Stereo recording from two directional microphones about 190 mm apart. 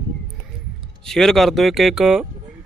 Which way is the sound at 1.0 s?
Centre (ahead or behind).